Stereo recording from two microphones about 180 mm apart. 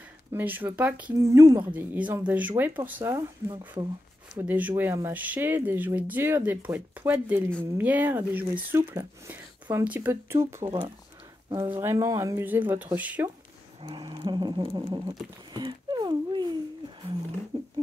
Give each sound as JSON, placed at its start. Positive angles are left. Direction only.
{"t": 0.3, "sound": "speech", "side_deg": -10}
{"t": 4.4, "sound": "speech", "side_deg": -10}
{"t": 13.8, "sound": "speech", "side_deg": -25}
{"t": 17.5, "sound": "a sound", "side_deg": -30}